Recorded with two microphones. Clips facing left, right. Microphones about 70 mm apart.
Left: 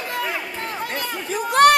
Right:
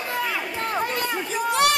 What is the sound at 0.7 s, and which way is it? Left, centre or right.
Chatter, right.